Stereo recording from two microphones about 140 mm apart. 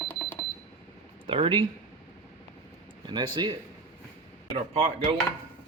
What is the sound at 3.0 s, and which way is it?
Speech, 30° right (ahead or behind).